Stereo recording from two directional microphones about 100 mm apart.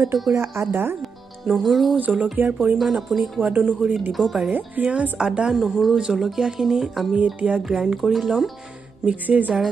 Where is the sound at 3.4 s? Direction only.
15° right (ahead or behind).